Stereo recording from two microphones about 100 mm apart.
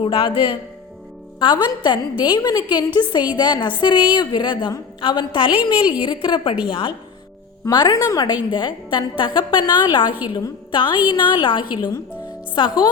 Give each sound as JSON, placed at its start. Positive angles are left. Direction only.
{"t": 0.0, "sound": "a woman's voice", "side_deg": 65}
{"t": 7.7, "sound": "a woman's voice", "side_deg": 45}
{"t": 8.4, "sound": "a woman's voice", "side_deg": 50}